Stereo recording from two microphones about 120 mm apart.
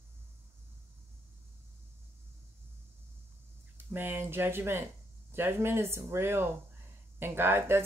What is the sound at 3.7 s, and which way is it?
Speech, 15° right (ahead or behind).